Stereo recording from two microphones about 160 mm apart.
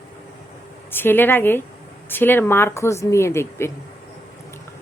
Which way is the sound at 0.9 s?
15° left (ahead or behind).